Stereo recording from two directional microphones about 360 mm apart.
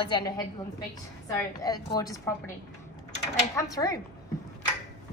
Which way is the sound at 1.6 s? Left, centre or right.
Centre.